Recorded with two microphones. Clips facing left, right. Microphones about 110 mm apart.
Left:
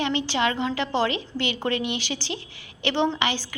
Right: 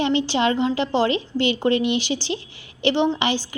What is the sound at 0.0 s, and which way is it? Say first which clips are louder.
A woman's voice: right 4 dB; 25° right (ahead or behind).